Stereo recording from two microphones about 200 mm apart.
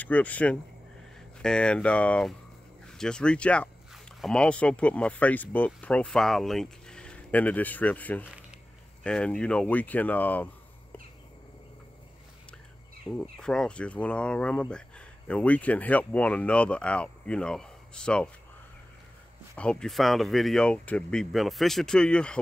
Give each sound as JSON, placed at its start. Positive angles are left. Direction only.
{"t": 0.0, "sound": "speech", "side_deg": 10}
{"t": 13.2, "sound": "speech", "side_deg": 5}
{"t": 19.5, "sound": "speech", "side_deg": 5}